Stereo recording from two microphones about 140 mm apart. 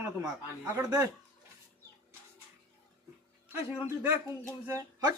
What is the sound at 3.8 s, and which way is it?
A man's voice, 20° right (ahead or behind).